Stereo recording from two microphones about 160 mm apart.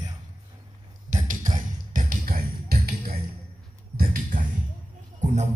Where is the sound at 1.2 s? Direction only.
55° right (ahead or behind).